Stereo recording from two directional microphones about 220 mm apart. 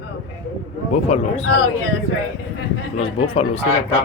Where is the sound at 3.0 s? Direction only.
25° left (ahead or behind).